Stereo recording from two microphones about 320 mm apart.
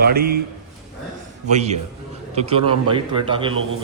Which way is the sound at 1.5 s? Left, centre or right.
Right.